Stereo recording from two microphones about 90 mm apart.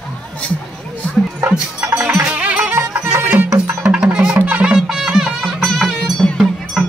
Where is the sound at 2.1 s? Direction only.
15° right (ahead or behind).